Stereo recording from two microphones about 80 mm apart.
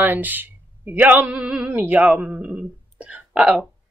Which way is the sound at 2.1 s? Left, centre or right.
Right.